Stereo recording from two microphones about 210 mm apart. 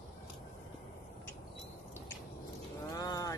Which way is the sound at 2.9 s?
15° left (ahead or behind).